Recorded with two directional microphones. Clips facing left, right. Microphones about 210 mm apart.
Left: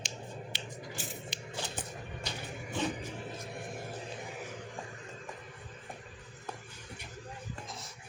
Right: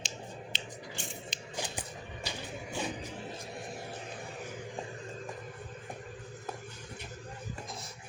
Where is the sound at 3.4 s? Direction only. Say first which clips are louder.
Even; 55° left (ahead or behind).